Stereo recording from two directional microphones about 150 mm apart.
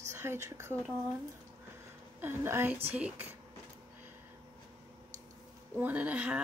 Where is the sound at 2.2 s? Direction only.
15° right (ahead or behind).